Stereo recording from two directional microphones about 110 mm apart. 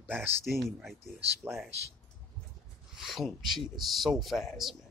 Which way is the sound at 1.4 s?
20° right (ahead or behind).